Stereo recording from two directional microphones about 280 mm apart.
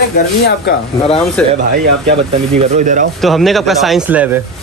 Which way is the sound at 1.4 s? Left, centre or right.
Centre.